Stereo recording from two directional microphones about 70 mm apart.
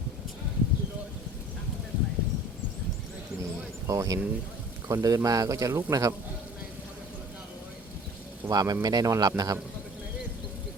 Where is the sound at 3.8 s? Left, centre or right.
Right.